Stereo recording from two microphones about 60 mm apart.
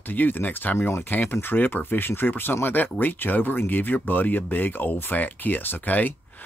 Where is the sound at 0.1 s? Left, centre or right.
Left.